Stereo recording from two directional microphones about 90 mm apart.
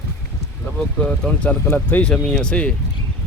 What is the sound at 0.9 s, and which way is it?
Speech, 10° left (ahead or behind).